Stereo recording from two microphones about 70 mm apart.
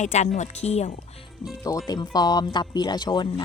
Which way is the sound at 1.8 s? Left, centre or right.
Left.